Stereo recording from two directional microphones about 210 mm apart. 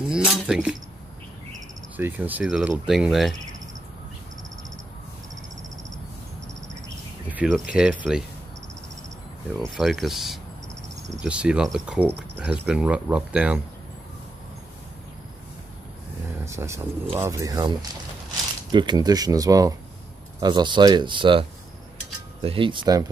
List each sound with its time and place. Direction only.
0.1 s a sound: 5° right (ahead or behind)
2.0 s speech: 10° right (ahead or behind)
7.2 s speech: 5° right (ahead or behind)
9.8 s speech: centre (ahead or behind)
16.4 s speech: 15° right (ahead or behind)